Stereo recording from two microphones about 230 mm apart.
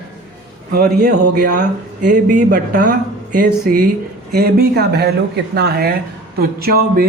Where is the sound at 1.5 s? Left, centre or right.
Right.